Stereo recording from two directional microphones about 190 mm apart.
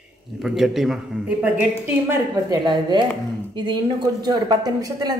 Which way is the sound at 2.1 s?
20° right (ahead or behind).